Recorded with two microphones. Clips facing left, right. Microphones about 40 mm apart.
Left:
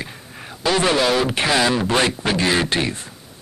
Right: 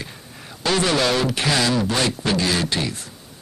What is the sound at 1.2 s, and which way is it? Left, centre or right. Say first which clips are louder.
Speech: left 2 dB; left.